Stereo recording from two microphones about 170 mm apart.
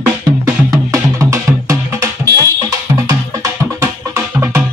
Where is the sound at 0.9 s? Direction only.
20° right (ahead or behind).